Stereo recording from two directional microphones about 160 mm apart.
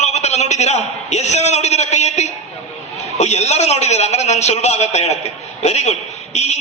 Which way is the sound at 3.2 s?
45° left (ahead or behind).